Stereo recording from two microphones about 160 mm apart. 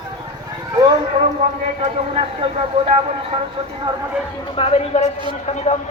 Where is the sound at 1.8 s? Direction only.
40° right (ahead or behind).